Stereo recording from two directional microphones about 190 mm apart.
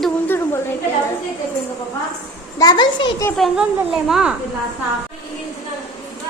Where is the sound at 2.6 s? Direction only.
20° left (ahead or behind).